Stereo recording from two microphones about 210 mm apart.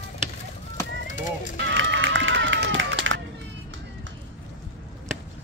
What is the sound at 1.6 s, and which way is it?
Run, 60° right (ahead or behind).